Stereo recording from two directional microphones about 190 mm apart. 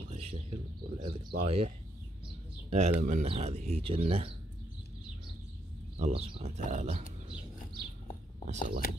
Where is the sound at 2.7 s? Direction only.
35° right (ahead or behind).